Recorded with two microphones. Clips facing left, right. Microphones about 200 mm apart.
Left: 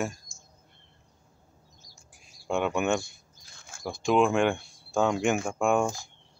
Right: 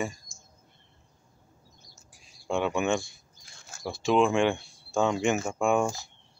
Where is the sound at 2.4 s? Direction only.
Centre (ahead or behind).